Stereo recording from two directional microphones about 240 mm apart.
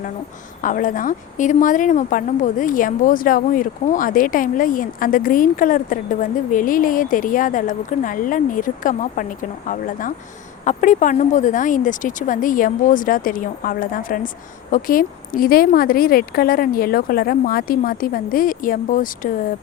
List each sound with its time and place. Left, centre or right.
0.6 s a woman's voice: left